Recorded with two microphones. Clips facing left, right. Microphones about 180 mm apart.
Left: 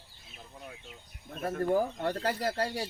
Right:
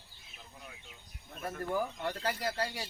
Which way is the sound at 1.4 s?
50° left (ahead or behind).